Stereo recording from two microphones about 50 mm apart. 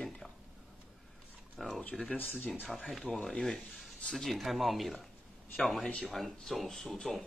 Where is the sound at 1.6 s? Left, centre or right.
Centre.